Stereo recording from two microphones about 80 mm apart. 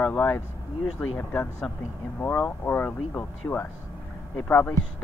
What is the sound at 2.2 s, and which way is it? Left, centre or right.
Speech, left.